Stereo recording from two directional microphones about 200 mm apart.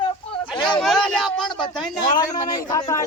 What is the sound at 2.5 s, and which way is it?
Speech, 20° left (ahead or behind).